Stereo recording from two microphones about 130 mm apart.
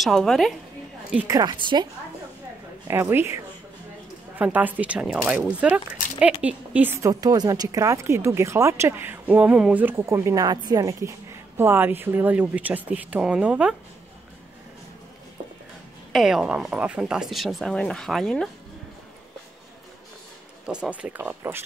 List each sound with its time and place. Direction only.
0.0 s speech: centre (ahead or behind)
1.2 s a woman's voice: 30° right (ahead or behind)
2.9 s a woman's voice: 15° right (ahead or behind)
4.4 s a woman's voice: 10° right (ahead or behind)
16.1 s speech: centre (ahead or behind)
20.6 s a woman's voice: 10° right (ahead or behind)